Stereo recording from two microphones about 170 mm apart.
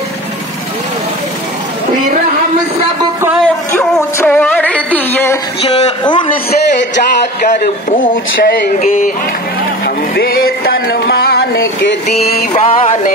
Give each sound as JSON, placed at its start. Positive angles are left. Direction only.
{"t": 3.4, "sound": "music", "side_deg": 15}
{"t": 5.6, "sound": "a man's voice", "side_deg": 35}
{"t": 7.4, "sound": "speech", "side_deg": 55}
{"t": 9.8, "sound": "music", "side_deg": 60}
{"t": 12.5, "sound": "a man's voice", "side_deg": 35}